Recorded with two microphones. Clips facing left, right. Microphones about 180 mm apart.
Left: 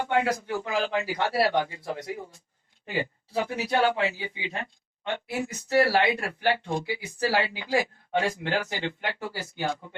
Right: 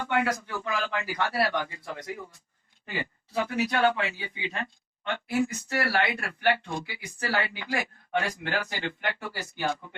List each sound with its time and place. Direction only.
0.0 s speech: 20° left (ahead or behind)